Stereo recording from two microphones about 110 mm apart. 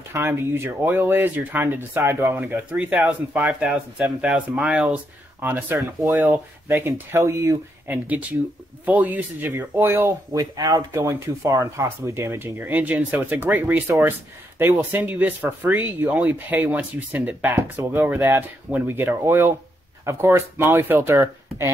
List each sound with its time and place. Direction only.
0.1 s speech: 20° right (ahead or behind)
6.8 s speech: 25° right (ahead or behind)
7.9 s speech: 15° right (ahead or behind)